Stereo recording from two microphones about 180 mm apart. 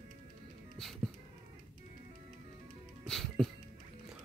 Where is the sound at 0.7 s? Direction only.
Centre (ahead or behind).